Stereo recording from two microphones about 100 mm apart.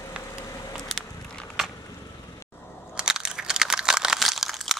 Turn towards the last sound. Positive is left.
turn(degrees=0)  # may be behind; listen again after turning